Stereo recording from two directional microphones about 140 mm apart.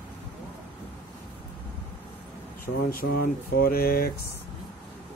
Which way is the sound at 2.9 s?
90° left.